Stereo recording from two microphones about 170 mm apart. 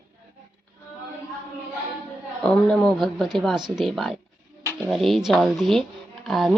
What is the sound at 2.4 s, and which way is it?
Speech, 5° left (ahead or behind).